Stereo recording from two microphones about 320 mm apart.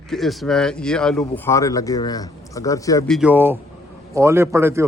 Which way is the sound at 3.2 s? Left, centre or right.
Centre.